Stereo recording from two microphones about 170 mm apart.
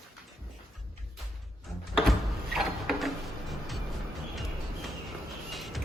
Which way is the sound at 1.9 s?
Centre (ahead or behind).